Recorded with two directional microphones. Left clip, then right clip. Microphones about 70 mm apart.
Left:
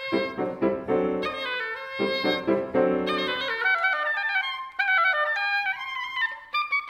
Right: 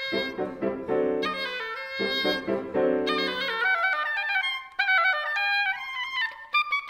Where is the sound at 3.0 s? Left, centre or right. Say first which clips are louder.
Even; right.